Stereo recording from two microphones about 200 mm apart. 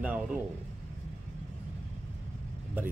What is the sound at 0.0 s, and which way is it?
Speech, 10° right (ahead or behind).